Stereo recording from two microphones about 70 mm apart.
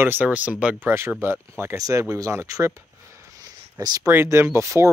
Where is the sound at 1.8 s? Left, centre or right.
Right.